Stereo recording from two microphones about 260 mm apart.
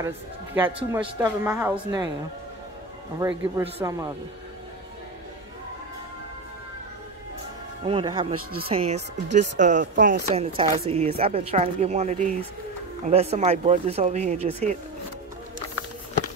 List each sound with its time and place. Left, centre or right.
0.6 s a woman's voice: centre
3.2 s a woman's voice: centre
7.8 s speech: centre